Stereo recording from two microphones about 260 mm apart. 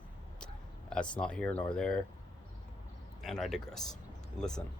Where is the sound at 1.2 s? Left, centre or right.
Centre.